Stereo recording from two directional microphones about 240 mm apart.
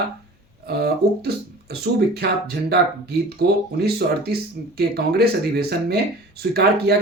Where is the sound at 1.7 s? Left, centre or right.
Right.